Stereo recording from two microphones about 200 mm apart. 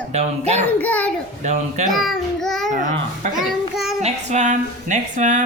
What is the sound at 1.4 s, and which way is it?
Speech, 35° right (ahead or behind).